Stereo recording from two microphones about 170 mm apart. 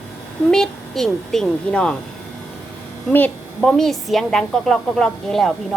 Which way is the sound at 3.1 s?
10° left (ahead or behind).